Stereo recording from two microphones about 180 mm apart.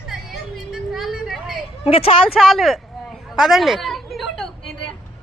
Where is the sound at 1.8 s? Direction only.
30° left (ahead or behind).